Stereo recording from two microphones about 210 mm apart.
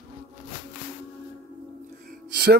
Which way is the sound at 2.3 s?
50° right (ahead or behind).